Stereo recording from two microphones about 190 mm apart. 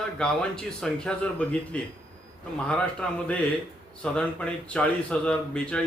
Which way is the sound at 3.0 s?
5° left (ahead or behind).